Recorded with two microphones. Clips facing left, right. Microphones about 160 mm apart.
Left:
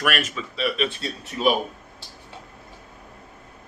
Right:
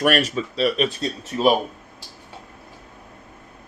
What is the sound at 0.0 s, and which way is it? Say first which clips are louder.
Speech: right 6 dB; 35° right (ahead or behind).